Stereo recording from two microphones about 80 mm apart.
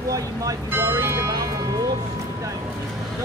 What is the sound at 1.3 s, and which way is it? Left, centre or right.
Speech, right.